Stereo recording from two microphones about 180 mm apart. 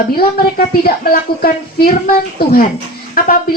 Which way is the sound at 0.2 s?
55° left (ahead or behind).